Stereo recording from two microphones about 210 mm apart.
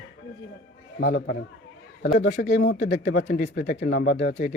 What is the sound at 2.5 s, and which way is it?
Speech, 55° left (ahead or behind).